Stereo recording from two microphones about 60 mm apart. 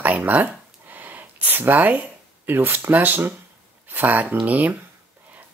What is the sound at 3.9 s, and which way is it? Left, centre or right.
Speech, right.